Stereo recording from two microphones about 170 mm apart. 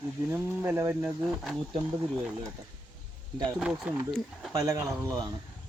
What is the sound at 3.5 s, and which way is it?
Speech, 5° right (ahead or behind).